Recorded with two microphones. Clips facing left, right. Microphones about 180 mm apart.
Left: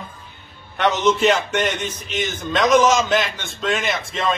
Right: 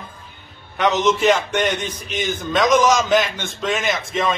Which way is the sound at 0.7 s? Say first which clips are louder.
Even; centre (ahead or behind).